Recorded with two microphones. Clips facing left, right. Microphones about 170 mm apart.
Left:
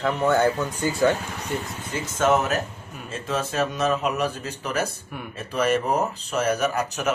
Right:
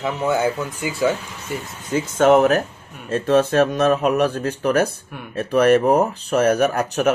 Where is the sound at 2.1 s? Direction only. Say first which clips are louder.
Right 7 dB; 55° right (ahead or behind).